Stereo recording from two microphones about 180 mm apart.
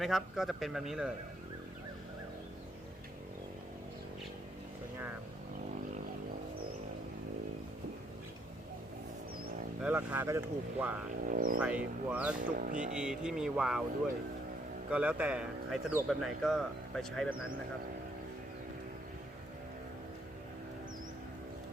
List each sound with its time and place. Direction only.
0.0 s speech: centre (ahead or behind)
9.8 s speech: 10° right (ahead or behind)
11.3 s speech: 50° right (ahead or behind)
11.6 s speech: 5° right (ahead or behind)
12.4 s speech: 50° right (ahead or behind)
12.8 s speech: 5° right (ahead or behind)
14.8 s speech: 5° right (ahead or behind)